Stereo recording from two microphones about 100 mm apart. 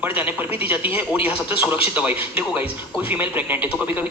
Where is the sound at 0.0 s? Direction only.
20° right (ahead or behind).